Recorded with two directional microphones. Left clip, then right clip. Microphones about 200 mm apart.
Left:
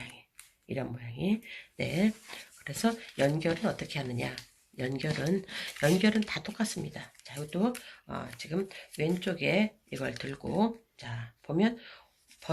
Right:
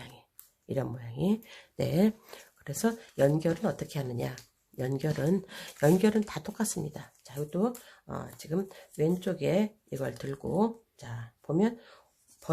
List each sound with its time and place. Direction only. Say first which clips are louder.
0.7 s speech: right 3 dB; 50° right (ahead or behind)